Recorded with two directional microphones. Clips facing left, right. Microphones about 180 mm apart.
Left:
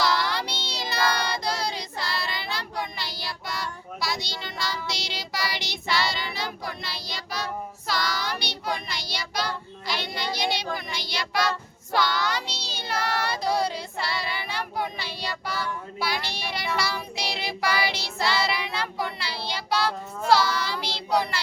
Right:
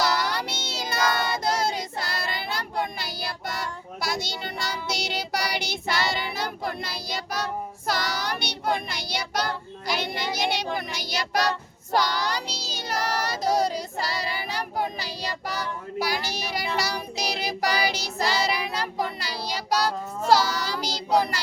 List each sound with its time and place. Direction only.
0.0 s child singing: 45° right (ahead or behind)